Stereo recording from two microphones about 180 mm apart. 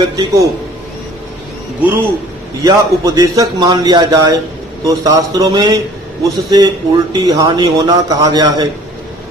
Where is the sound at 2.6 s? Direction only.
20° right (ahead or behind).